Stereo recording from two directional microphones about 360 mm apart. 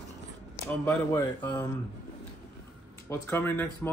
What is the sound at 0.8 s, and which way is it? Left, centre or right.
Speech, centre.